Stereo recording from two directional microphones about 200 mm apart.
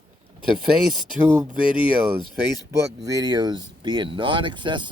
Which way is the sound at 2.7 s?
15° right (ahead or behind).